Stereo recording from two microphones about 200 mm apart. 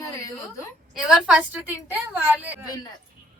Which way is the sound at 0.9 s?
Centre (ahead or behind).